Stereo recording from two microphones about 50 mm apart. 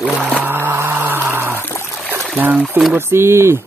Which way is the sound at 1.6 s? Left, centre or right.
Left.